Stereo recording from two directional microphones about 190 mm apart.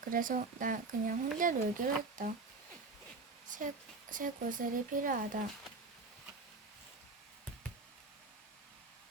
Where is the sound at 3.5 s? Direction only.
40° right (ahead or behind).